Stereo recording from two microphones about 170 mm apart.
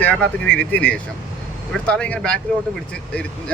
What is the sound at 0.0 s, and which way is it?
Speech, 5° left (ahead or behind).